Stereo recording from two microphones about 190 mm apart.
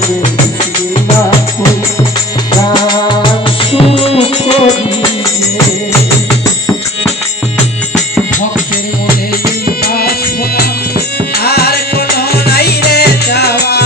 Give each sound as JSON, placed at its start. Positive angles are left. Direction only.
{"t": 2.8, "sound": "music", "side_deg": 25}
{"t": 9.6, "sound": "music", "side_deg": 55}
{"t": 11.4, "sound": "music", "side_deg": 55}